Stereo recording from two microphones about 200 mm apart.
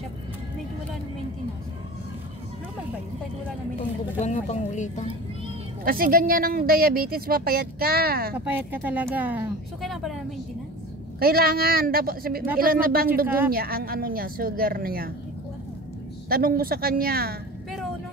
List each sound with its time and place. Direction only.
4.2 s speech: 35° left (ahead or behind)
5.9 s a woman's voice: 45° right (ahead or behind)
8.5 s speech: 10° right (ahead or behind)
11.1 s a woman's voice: 50° right (ahead or behind)
16.3 s a woman's voice: 45° right (ahead or behind)